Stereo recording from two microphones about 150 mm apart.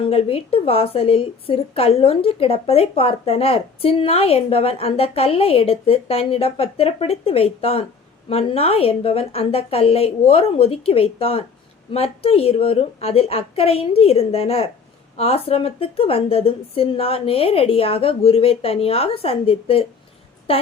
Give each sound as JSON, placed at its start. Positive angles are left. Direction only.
{"t": 0.0, "sound": "a woman's voice", "side_deg": 40}